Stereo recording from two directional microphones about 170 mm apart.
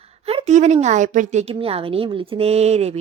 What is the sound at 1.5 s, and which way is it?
Speech, 35° right (ahead or behind).